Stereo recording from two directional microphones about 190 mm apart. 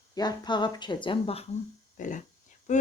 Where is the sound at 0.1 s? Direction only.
20° left (ahead or behind).